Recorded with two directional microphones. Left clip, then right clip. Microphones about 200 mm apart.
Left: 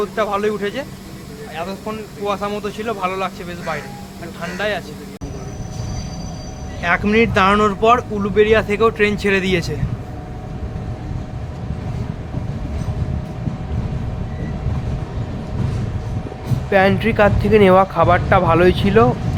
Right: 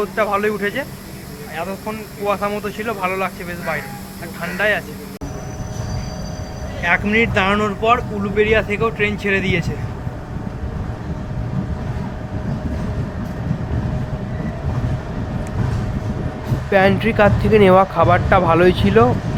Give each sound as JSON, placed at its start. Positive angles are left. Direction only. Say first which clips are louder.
{"t": 0.0, "sound": "speech", "louder": "right 1 dB", "side_deg": 5}
{"t": 6.8, "sound": "speech", "louder": "left 1 dB", "side_deg": 35}
{"t": 16.6, "sound": "speech", "louder": "even", "side_deg": 0}